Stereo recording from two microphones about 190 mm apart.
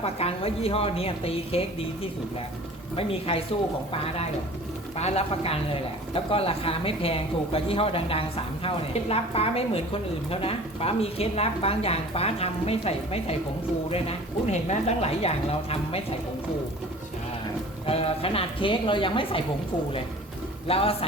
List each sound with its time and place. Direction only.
0.0 s speech: 30° left (ahead or behind)
2.9 s speech: 30° left (ahead or behind)
17.8 s speech: 30° left (ahead or behind)
20.7 s speech: 30° left (ahead or behind)